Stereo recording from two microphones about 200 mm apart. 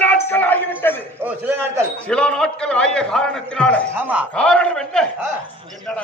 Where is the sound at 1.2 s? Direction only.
10° right (ahead or behind).